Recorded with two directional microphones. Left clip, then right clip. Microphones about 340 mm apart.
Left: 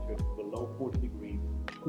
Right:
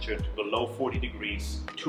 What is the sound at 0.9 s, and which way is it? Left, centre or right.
Speech, centre.